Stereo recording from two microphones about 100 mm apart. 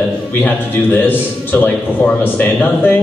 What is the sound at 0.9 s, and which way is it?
A man's voice, 20° left (ahead or behind).